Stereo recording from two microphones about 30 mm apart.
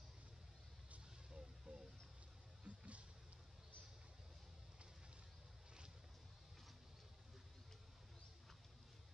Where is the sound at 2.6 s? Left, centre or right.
Right.